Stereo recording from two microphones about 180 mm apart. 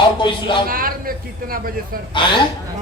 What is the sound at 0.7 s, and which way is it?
A woman's voice, 55° right (ahead or behind).